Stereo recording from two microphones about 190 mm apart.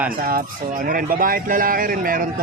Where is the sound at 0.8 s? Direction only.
50° right (ahead or behind).